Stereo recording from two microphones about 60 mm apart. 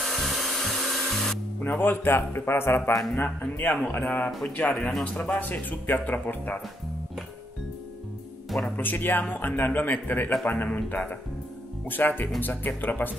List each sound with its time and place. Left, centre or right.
0.0 s tools: centre
1.6 s speech: left
8.7 s speech: left